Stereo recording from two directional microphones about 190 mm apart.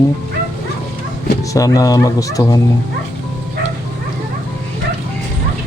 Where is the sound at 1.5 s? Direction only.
20° left (ahead or behind).